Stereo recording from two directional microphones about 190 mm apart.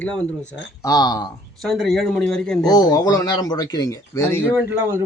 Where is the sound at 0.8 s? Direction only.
20° left (ahead or behind).